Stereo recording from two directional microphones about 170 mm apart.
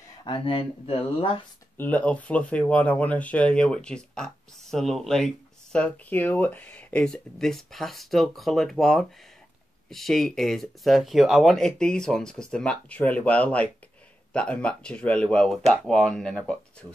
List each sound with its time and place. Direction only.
0.2 s speech: 30° left (ahead or behind)
1.8 s speech: 10° left (ahead or behind)